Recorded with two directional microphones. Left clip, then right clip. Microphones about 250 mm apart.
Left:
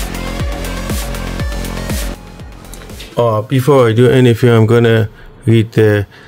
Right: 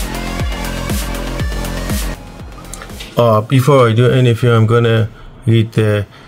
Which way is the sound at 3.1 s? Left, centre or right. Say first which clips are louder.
Right 2 dB; centre.